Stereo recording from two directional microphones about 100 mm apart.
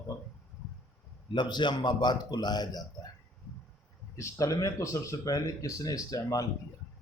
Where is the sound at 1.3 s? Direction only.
50° left (ahead or behind).